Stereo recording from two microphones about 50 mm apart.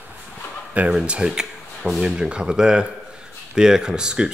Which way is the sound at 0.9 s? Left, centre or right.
Right.